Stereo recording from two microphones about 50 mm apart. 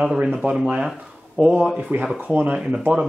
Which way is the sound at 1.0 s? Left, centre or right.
Centre.